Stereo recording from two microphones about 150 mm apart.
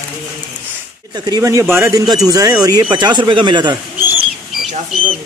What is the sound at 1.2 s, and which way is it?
A man's voice, 25° right (ahead or behind).